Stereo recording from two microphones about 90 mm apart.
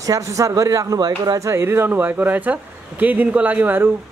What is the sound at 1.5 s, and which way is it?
Speech, 30° right (ahead or behind).